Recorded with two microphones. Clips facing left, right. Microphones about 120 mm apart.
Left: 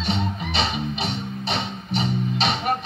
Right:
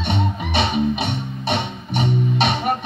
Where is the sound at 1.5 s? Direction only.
60° right (ahead or behind).